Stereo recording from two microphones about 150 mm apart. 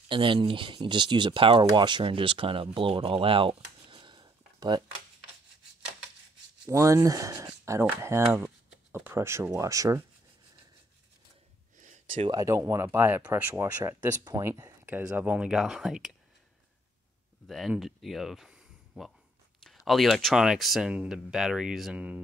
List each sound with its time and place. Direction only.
0.1 s speech: 35° right (ahead or behind)
6.7 s speech: 20° right (ahead or behind)
11.7 s a sound: 55° right (ahead or behind)
12.3 s speech: 20° right (ahead or behind); by 16.1 s 5° right (ahead or behind)
17.5 s speech: centre (ahead or behind)